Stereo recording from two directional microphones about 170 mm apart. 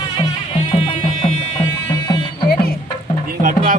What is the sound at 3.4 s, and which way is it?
Music, 50° right (ahead or behind).